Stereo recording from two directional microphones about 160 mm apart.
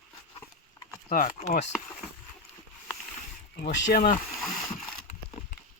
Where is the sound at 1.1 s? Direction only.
60° left (ahead or behind).